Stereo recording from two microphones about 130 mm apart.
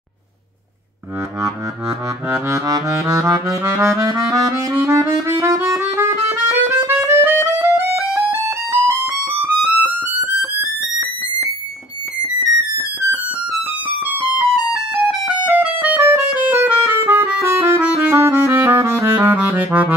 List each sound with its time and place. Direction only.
2.2 s saxophone: 20° right (ahead or behind)
7.2 s music: 20° right (ahead or behind)
13.9 s music: 15° right (ahead or behind)